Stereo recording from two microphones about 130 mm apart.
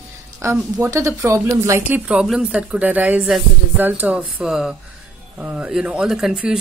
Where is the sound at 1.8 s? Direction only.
10° right (ahead or behind).